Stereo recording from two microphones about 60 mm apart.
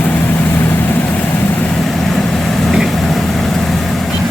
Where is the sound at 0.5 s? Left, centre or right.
Left.